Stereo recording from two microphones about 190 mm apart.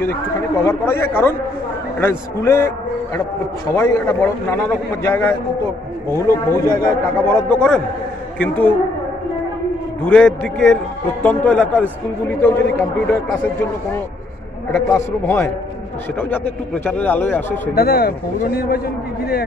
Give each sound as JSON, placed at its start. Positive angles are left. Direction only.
{"t": 0.7, "sound": "speech", "side_deg": 10}
{"t": 3.7, "sound": "speech", "side_deg": 15}
{"t": 10.0, "sound": "a man's voice", "side_deg": 5}
{"t": 17.7, "sound": "speech", "side_deg": 55}